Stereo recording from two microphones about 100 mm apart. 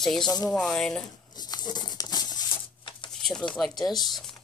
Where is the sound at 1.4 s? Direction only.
45° left (ahead or behind).